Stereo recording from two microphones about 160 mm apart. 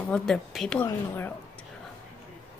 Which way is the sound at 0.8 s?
15° left (ahead or behind).